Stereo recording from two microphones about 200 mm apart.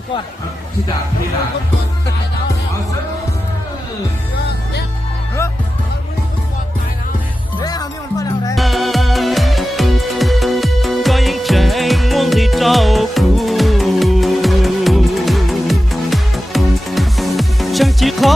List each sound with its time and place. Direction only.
7.6 s music: 20° left (ahead or behind)
8.5 s music: centre (ahead or behind)